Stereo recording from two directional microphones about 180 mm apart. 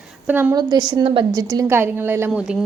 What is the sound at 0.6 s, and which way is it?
A woman's voice, 20° right (ahead or behind).